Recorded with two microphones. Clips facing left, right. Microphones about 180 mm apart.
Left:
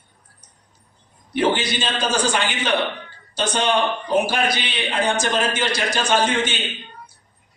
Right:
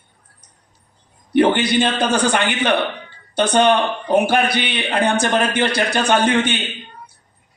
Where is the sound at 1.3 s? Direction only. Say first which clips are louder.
Right 6 dB; 60° right (ahead or behind).